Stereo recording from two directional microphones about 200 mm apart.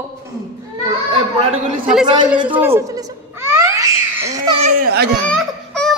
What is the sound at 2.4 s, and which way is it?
Babbling, 10° right (ahead or behind).